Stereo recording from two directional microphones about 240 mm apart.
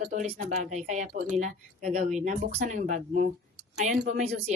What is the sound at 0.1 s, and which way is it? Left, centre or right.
A woman's voice, right.